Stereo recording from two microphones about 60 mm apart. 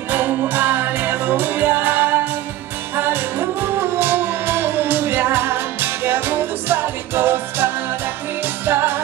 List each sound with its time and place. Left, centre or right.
0.1 s music: right